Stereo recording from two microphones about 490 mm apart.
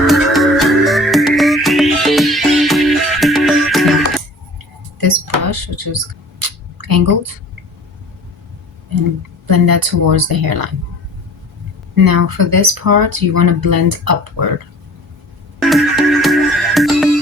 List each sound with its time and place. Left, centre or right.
0.1 s music: centre
4.9 s a sound: right
9.5 s speech: right
11.9 s speech: right
15.7 s music: centre